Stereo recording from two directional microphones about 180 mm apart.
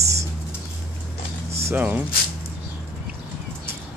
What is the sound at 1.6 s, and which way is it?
Speech, 10° right (ahead or behind).